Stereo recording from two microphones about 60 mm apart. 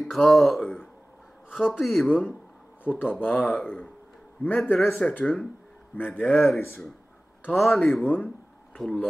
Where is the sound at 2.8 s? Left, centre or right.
Left.